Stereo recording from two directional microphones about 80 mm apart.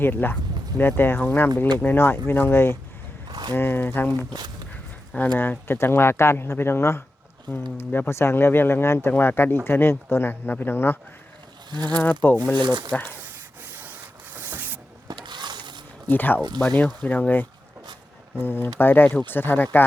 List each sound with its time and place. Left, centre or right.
0.0 s speech: left
3.2 s a sound: right
3.5 s speech: left
5.4 s speech: left
11.7 s speech: right
11.9 s speech: left
12.5 s speech: right
14.3 s mechanisms: right
15.0 s a sound: right
16.0 s speech: left